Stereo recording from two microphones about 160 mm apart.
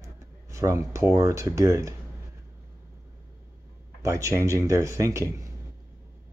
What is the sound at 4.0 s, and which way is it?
Speech, 20° right (ahead or behind).